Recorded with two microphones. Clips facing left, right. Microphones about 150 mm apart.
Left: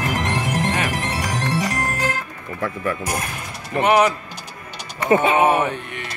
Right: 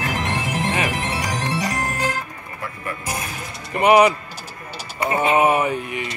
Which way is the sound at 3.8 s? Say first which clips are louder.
Right 3 dB; 5° right (ahead or behind).